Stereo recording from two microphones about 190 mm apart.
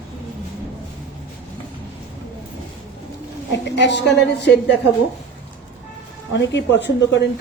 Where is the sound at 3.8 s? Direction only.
65° left (ahead or behind).